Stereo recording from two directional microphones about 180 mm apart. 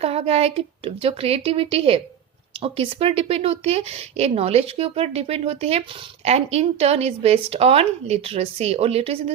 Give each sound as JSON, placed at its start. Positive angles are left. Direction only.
{"t": 0.0, "sound": "speech", "side_deg": -35}